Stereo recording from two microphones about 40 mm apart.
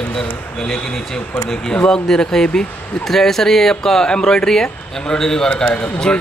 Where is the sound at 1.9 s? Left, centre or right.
Centre.